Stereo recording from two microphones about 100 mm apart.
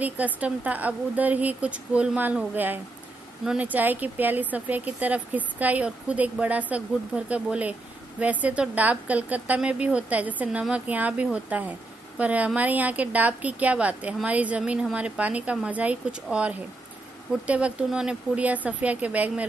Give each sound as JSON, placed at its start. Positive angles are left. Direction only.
{"t": 0.0, "sound": "a woman's voice", "side_deg": -15}